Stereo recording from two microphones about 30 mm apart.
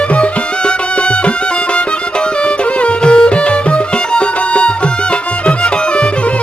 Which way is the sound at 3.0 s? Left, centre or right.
Left.